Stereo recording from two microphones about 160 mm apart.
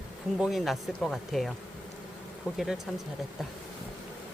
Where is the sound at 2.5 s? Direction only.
5° right (ahead or behind).